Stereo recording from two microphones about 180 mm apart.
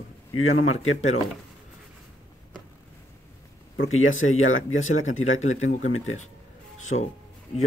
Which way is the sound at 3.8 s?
90° left.